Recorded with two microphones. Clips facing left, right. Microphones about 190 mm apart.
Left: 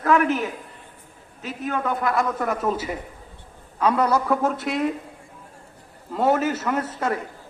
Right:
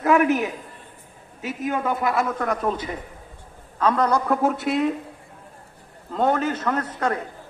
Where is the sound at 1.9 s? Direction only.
Centre (ahead or behind).